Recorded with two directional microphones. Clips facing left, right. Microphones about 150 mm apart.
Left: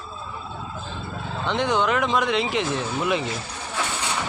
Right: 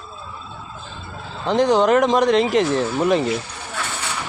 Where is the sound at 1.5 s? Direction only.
35° right (ahead or behind).